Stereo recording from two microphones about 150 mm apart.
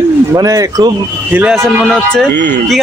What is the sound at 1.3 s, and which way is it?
Speech, 10° right (ahead or behind).